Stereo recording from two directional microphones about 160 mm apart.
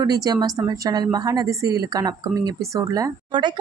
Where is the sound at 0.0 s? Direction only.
25° right (ahead or behind).